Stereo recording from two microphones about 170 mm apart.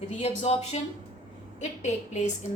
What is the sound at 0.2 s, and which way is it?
Speech, 40° left (ahead or behind).